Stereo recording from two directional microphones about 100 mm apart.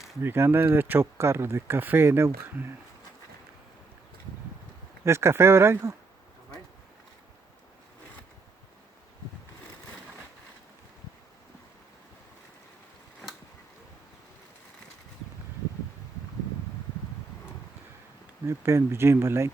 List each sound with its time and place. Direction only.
0.2 s speech: 25° right (ahead or behind)
5.0 s speech: 25° right (ahead or behind)
18.4 s speech: 30° right (ahead or behind)